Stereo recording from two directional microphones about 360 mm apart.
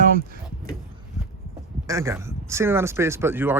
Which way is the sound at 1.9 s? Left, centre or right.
Centre.